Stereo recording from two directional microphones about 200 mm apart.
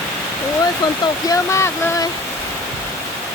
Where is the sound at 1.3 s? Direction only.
15° left (ahead or behind).